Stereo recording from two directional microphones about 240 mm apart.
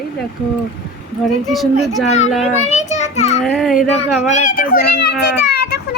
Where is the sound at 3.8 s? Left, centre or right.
Left.